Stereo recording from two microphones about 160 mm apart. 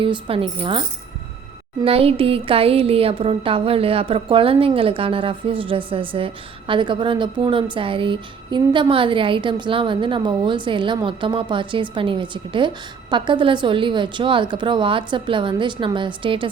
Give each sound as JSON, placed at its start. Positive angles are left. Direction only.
{"t": 0.0, "sound": "speech", "side_deg": -35}